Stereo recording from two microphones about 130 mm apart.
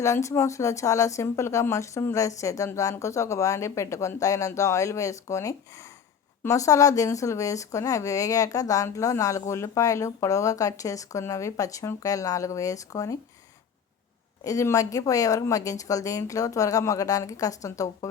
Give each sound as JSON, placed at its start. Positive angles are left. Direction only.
{"t": 0.0, "sound": "speech", "side_deg": 25}
{"t": 14.4, "sound": "speech", "side_deg": 25}